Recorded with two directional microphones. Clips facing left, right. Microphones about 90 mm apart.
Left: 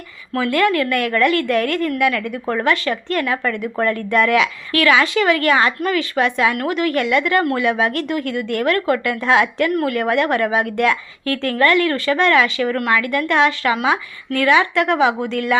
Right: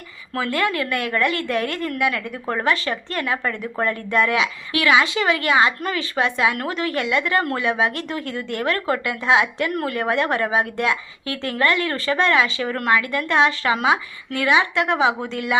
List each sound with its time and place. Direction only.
0.3 s speech: 30° right (ahead or behind)